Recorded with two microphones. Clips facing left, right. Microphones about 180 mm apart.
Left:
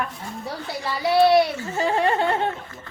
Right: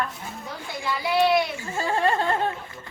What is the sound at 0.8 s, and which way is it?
Speech, 35° left (ahead or behind).